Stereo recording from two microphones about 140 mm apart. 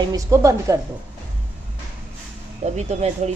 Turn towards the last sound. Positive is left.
turn(degrees=-50)  # may be behind; listen again after turning